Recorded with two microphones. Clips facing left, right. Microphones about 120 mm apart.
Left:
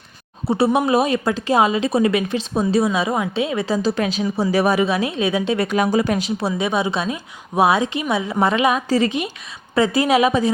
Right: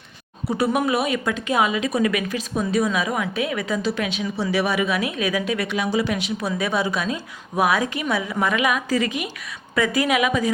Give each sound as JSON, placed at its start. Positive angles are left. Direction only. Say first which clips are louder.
{"t": 0.4, "sound": "speech", "louder": "left 4 dB", "side_deg": 30}
{"t": 5.6, "sound": "speech", "louder": "left 4 dB", "side_deg": 50}
{"t": 6.7, "sound": "a woman's voice", "louder": "even", "side_deg": 20}